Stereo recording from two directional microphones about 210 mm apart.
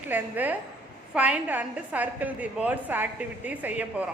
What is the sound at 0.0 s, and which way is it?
A man's voice, 10° right (ahead or behind).